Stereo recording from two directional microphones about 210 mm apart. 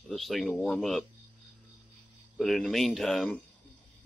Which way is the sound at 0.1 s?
Centre (ahead or behind).